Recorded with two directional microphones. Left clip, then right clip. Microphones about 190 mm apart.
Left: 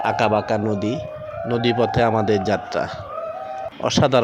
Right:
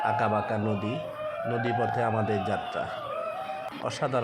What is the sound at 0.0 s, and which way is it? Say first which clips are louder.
Speech: left 7 dB; 35° left (ahead or behind).